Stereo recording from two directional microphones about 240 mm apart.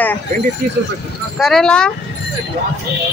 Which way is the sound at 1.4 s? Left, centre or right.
Centre.